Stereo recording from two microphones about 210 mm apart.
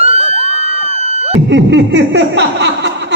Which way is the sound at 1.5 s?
60° right (ahead or behind).